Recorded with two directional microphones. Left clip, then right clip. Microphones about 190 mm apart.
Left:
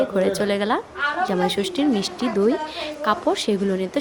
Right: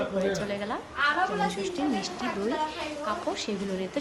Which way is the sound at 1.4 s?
45° left (ahead or behind).